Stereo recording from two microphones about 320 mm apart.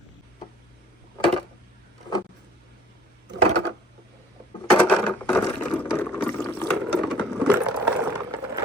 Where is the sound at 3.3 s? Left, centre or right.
Right.